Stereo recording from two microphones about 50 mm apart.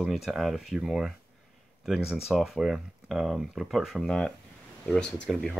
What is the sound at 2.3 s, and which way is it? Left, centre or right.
Speech, centre.